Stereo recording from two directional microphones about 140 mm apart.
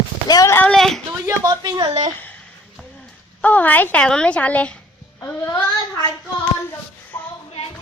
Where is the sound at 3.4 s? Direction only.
10° left (ahead or behind).